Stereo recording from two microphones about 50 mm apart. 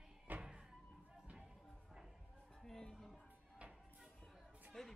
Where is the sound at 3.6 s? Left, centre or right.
Right.